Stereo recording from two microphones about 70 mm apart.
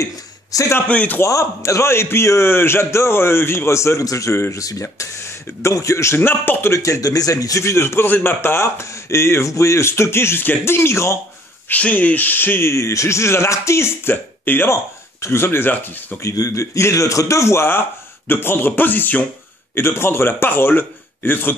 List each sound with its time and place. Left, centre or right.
0.0 s a sound: left
0.8 s speech: left
1.2 s speech: left
4.0 s a man's voice: left
4.8 s speech: left
6.7 s speech: left
11.7 s speech: left
16.2 s a man's voice: left